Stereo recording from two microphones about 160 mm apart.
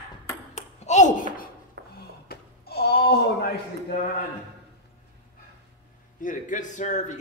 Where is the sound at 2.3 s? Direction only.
80° left.